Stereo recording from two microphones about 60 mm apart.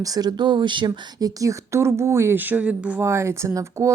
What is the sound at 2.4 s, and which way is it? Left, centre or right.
Speech, right.